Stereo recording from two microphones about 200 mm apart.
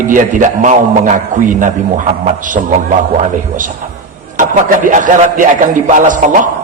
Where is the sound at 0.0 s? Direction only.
40° right (ahead or behind).